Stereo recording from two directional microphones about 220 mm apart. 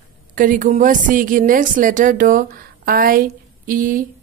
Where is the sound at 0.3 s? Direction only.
35° right (ahead or behind).